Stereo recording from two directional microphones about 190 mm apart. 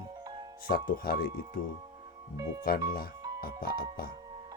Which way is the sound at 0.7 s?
50° left (ahead or behind).